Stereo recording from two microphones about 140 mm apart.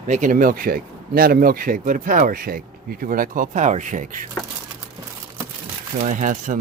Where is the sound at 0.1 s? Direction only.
70° right (ahead or behind).